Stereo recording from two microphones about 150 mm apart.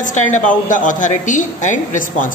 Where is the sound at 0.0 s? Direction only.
55° left (ahead or behind).